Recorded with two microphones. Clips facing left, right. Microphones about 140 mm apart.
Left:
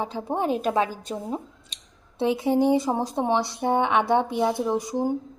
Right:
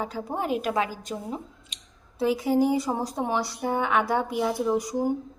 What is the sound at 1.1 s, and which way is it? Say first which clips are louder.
Speech: left 2 dB; 10° left (ahead or behind).